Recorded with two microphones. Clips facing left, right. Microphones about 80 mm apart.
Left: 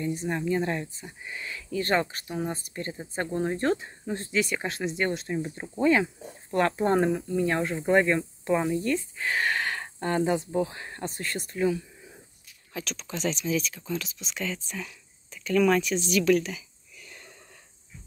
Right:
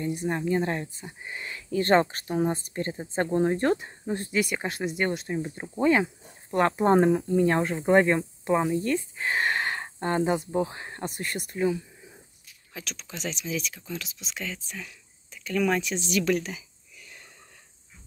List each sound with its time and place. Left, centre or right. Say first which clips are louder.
0.1 s speech: right 3 dB; centre
5.3 s speech: even; centre
5.8 s speech: even; right
11.3 s speech: even; centre
15.9 s speech: left 3 dB; right